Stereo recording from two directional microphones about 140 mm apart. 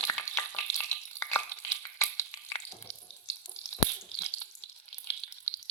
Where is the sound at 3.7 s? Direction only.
20° left (ahead or behind).